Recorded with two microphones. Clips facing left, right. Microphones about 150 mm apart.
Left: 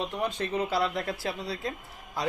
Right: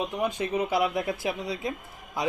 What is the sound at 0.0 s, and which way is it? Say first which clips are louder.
A man's voice: right 2 dB; 15° right (ahead or behind).